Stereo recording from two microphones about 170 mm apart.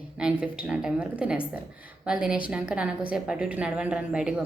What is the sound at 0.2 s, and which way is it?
A woman's voice, 5° right (ahead or behind).